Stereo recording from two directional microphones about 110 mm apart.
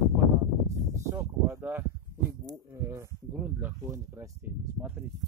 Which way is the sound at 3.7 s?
25° right (ahead or behind).